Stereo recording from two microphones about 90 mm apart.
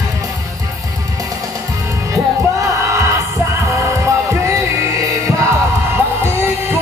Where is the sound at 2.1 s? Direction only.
35° right (ahead or behind).